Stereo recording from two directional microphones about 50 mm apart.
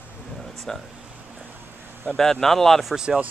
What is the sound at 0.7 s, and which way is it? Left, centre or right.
Speech, centre.